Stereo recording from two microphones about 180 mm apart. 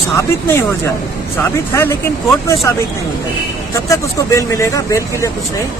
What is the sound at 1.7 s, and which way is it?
Speech, 15° left (ahead or behind).